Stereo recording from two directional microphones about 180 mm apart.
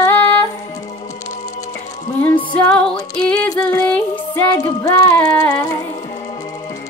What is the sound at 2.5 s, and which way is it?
Music, 5° left (ahead or behind).